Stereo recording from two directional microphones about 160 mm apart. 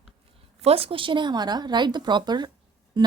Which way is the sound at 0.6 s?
40° right (ahead or behind).